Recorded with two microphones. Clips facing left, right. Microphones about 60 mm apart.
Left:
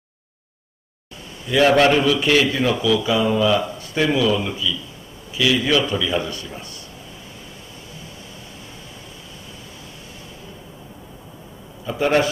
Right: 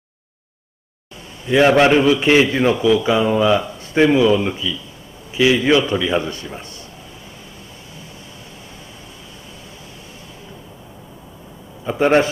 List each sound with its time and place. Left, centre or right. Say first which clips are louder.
1.7 s a man's voice: right 2 dB; centre
11.8 s a man's voice: right 4 dB; right